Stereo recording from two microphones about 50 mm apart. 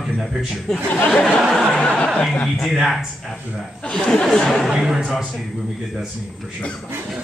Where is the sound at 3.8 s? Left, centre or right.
Centre.